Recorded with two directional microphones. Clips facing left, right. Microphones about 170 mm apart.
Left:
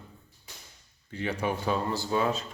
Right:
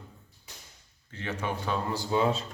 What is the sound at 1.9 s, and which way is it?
Speech, 15° right (ahead or behind).